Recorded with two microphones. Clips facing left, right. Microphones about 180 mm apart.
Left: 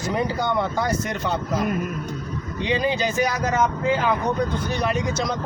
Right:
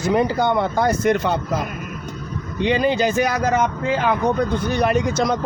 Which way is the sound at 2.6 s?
60° right (ahead or behind).